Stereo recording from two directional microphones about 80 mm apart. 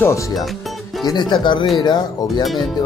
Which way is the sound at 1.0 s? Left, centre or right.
Left.